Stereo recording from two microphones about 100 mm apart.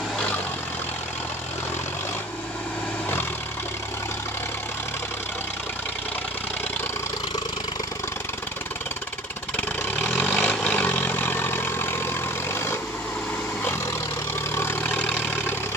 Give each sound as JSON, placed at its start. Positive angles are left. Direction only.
{"t": 9.6, "sound": "vehicle", "side_deg": 15}
{"t": 12.5, "sound": "a sound", "side_deg": 25}
{"t": 14.5, "sound": "vehicle", "side_deg": 25}